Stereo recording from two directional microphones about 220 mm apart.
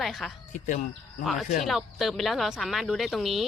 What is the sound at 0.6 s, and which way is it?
Speech, 35° left (ahead or behind).